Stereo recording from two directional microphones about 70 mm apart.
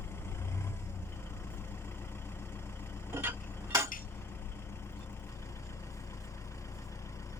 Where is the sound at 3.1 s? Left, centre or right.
Right.